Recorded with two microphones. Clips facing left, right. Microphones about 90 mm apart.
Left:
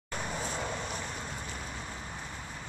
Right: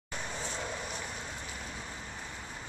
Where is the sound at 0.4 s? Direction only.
10° left (ahead or behind).